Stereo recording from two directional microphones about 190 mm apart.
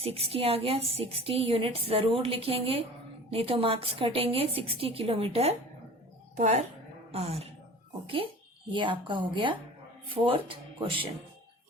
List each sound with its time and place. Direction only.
0.0 s a woman's voice: 30° right (ahead or behind)